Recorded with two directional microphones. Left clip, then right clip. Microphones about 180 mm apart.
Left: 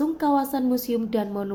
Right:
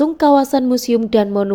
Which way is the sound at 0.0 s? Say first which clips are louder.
Right 10 dB; 45° right (ahead or behind).